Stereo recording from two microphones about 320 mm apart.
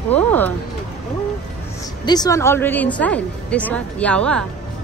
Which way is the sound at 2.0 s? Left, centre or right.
Centre.